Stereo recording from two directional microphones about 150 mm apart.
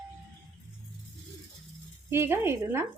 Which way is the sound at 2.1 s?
15° right (ahead or behind).